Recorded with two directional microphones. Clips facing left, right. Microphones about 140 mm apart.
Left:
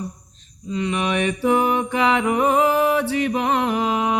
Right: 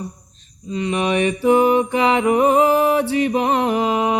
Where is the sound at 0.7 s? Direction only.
25° right (ahead or behind).